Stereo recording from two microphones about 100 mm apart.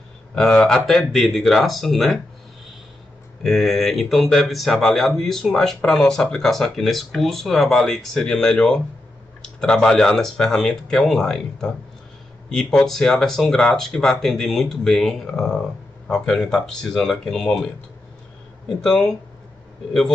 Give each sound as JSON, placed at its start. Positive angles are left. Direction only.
{"t": 0.3, "sound": "speech", "side_deg": 5}
{"t": 3.4, "sound": "speech", "side_deg": 0}
{"t": 18.7, "sound": "speech", "side_deg": 5}